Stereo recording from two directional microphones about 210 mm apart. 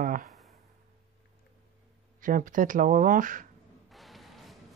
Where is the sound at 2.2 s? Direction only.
40° right (ahead or behind).